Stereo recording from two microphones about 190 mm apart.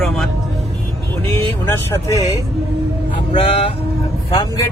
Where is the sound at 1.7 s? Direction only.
15° left (ahead or behind).